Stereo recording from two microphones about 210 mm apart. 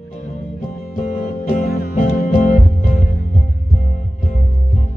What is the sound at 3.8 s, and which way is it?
Music, 35° left (ahead or behind).